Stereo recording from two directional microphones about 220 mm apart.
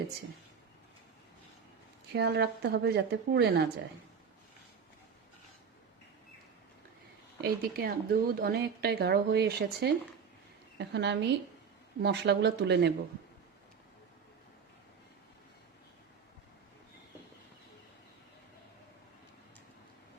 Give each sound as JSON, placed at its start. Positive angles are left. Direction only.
{"t": 2.1, "sound": "a woman's voice", "side_deg": -50}
{"t": 7.4, "sound": "a woman's voice", "side_deg": -45}